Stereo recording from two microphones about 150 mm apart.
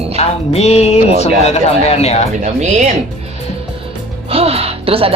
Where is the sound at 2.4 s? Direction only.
50° right (ahead or behind).